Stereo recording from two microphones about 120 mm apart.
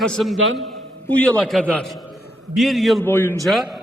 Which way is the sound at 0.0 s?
5° left (ahead or behind).